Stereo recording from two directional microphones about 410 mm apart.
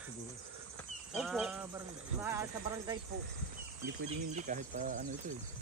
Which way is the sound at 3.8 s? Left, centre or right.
Centre.